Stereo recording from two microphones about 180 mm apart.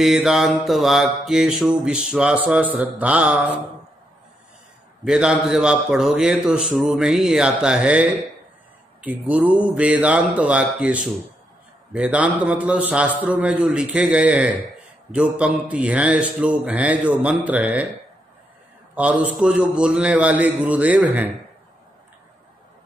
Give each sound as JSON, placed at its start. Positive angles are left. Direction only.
{"t": 0.0, "sound": "a man's voice", "side_deg": 0}
{"t": 5.0, "sound": "a man's voice", "side_deg": -5}
{"t": 18.9, "sound": "a man's voice", "side_deg": -5}